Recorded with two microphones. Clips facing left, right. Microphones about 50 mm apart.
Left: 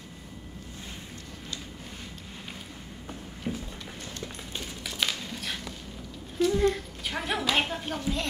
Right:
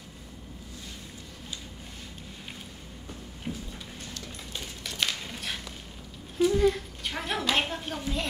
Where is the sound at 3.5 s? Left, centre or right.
Left.